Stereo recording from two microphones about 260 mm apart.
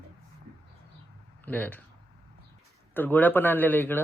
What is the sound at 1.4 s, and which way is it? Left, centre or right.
Speech, centre.